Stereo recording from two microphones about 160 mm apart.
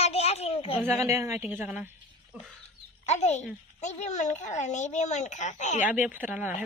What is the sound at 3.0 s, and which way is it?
A woman's voice, 45° left (ahead or behind).